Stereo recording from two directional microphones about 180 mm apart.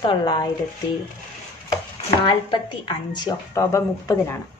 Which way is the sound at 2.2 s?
25° left (ahead or behind).